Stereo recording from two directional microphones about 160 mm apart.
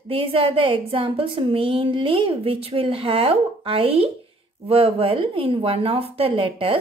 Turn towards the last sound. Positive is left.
turn(degrees=-35)  # may be behind; listen again after turning